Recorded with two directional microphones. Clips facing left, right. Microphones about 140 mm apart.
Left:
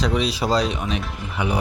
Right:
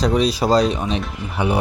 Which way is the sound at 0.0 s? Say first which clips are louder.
Right 4 dB; 40° right (ahead or behind).